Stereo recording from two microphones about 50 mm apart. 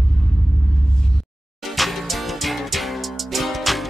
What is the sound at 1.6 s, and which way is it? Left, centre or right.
Music, centre.